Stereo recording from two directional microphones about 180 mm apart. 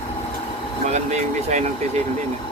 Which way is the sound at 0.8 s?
40° right (ahead or behind).